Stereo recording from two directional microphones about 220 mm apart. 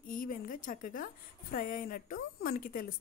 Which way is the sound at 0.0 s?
40° left (ahead or behind).